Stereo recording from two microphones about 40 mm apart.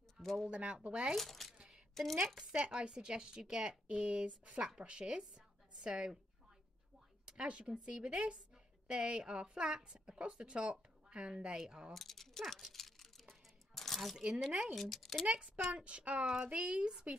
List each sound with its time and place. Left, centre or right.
0.2 s speech: centre
0.5 s a woman's voice: right
1.1 s speech: centre
2.2 s speech: centre
2.5 s a woman's voice: right
7.2 s a woman's voice: right
11.9 s a sound: centre
14.1 s speech: centre
14.8 s speech: centre
15.7 s a woman's voice: right